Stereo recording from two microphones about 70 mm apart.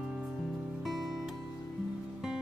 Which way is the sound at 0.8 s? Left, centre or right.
Centre.